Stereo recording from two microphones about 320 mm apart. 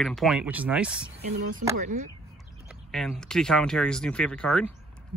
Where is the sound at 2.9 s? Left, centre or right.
Centre.